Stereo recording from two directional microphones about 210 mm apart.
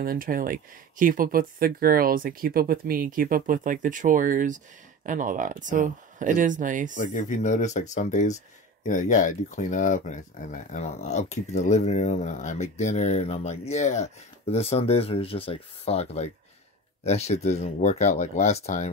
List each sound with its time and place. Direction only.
0.0 s speech: 40° right (ahead or behind)
7.0 s speech: 35° left (ahead or behind)